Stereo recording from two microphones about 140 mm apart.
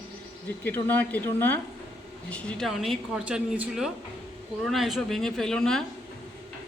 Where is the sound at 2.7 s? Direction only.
Centre (ahead or behind).